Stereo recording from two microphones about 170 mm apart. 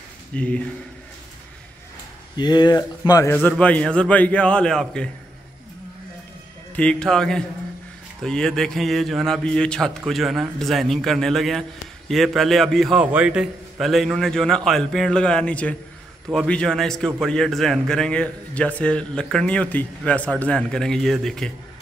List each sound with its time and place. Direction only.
0.3 s a man's voice: 5° left (ahead or behind)
2.3 s speech: 25° left (ahead or behind)
3.4 s a man's voice: 10° left (ahead or behind)
6.7 s a man's voice: 5° left (ahead or behind)